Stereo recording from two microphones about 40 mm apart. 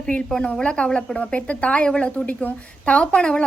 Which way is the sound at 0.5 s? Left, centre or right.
Left.